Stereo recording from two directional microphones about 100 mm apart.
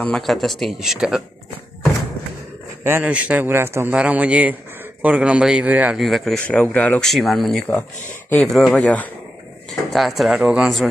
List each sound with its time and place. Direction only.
0.0 s speech: 5° left (ahead or behind)
2.8 s a man's voice: 25° right (ahead or behind)
3.1 s a man's voice: 15° right (ahead or behind)
3.4 s a man's voice: 25° right (ahead or behind)
3.9 s a man's voice: 10° right (ahead or behind)
5.9 s speech: centre (ahead or behind)
6.4 s speech: 15° left (ahead or behind)
7.0 s speech: centre (ahead or behind)